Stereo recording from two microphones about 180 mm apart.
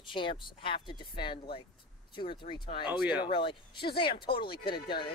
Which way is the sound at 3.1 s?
25° left (ahead or behind).